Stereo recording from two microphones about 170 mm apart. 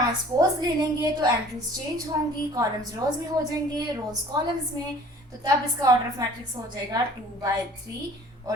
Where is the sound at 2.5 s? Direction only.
20° right (ahead or behind).